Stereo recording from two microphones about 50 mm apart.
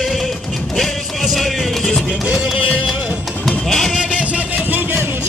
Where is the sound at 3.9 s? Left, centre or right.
Right.